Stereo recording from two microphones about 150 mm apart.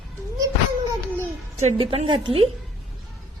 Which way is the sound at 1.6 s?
45° right (ahead or behind).